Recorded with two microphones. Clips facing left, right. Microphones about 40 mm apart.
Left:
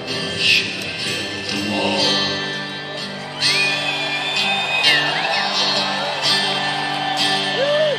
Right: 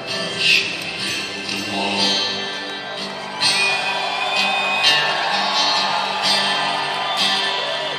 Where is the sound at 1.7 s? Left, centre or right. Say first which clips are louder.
Left 2 dB; centre.